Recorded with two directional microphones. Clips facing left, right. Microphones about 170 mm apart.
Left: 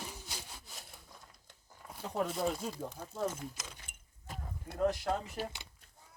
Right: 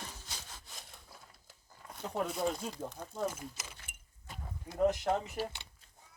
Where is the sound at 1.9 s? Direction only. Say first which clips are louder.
Left 1 dB; centre (ahead or behind).